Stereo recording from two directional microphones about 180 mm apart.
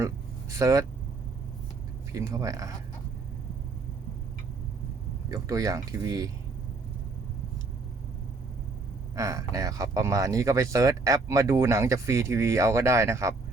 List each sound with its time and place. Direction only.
0.6 s speech: 15° right (ahead or behind)
2.1 s speech: 15° right (ahead or behind)
5.3 s speech: 20° right (ahead or behind)
9.1 s speech: 15° right (ahead or behind)